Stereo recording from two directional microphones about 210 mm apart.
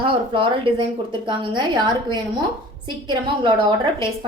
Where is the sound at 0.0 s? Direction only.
25° right (ahead or behind).